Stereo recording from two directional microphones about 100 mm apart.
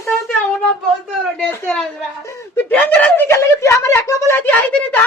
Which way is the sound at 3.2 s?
25° left (ahead or behind).